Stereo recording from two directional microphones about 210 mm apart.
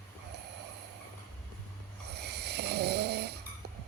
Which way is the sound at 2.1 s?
50° right (ahead or behind).